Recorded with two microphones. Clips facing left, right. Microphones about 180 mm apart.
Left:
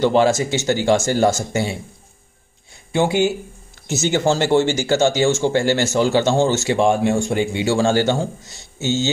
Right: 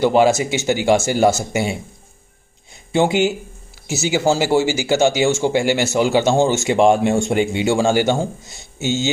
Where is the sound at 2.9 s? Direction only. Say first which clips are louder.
Right 1 dB; 20° right (ahead or behind).